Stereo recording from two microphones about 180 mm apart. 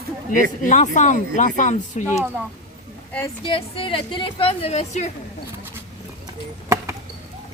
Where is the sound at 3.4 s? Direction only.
30° left (ahead or behind).